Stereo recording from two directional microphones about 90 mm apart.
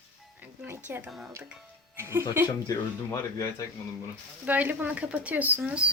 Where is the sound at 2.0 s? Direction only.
25° right (ahead or behind).